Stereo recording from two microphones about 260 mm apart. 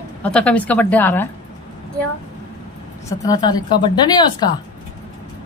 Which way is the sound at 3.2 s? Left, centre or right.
Centre.